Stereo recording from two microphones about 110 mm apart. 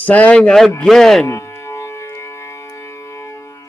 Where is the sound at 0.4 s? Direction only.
5° left (ahead or behind).